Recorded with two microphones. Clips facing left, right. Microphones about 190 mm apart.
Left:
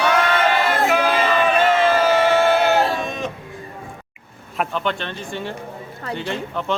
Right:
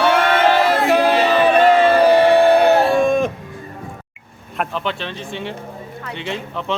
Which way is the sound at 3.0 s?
50° right (ahead or behind).